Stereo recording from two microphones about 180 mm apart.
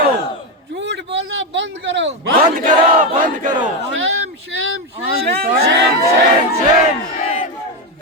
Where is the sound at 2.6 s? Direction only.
45° right (ahead or behind).